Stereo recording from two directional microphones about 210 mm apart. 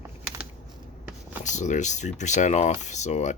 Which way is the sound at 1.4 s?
35° left (ahead or behind).